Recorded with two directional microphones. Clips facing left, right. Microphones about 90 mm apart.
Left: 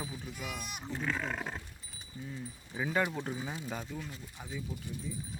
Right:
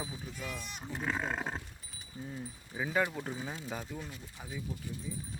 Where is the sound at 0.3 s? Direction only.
15° left (ahead or behind).